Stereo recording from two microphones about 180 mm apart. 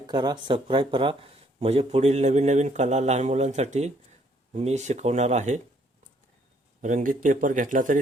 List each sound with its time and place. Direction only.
0.1 s speech: 25° right (ahead or behind); by 5.5 s 40° right (ahead or behind)
6.8 s speech: 45° right (ahead or behind)